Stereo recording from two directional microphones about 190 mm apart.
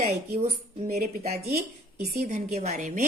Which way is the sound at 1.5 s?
55° right (ahead or behind).